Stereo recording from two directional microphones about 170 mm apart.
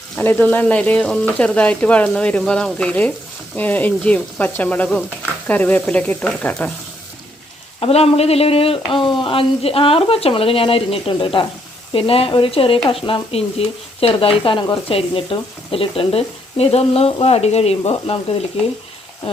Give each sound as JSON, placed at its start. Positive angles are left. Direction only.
{"t": 0.2, "sound": "speech", "side_deg": 10}
{"t": 7.8, "sound": "speech", "side_deg": 35}